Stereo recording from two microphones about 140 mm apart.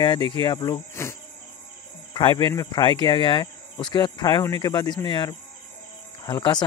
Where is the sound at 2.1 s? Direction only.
30° left (ahead or behind).